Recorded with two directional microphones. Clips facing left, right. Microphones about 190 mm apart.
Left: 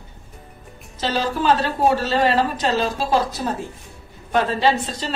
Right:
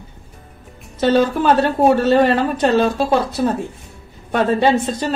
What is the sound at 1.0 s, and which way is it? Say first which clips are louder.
A woman's voice: right 6 dB; 55° right (ahead or behind).